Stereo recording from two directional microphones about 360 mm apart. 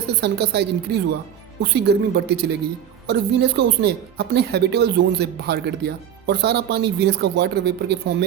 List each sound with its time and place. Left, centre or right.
0.1 s speech: right